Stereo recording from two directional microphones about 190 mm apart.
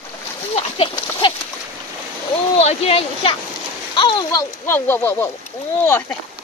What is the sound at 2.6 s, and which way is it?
Speech, 35° left (ahead or behind).